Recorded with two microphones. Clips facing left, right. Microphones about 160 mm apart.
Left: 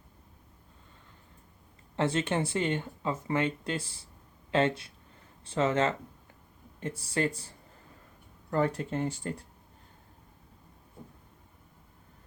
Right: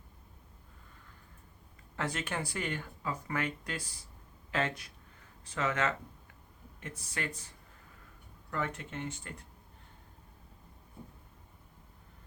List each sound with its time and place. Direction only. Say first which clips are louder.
2.0 s speech: left 8 dB; 25° left (ahead or behind)
8.4 s speech: left 9 dB; 35° left (ahead or behind)